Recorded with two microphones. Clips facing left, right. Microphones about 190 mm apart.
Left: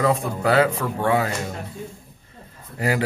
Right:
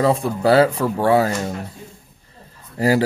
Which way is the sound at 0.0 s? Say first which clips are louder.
Right 4 dB; 30° right (ahead or behind).